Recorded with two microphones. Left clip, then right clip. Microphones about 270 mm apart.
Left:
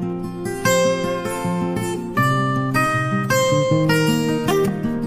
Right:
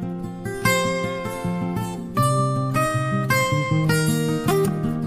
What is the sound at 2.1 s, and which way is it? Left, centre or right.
Music, centre.